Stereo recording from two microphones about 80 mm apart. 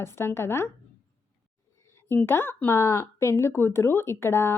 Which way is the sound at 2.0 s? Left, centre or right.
Left.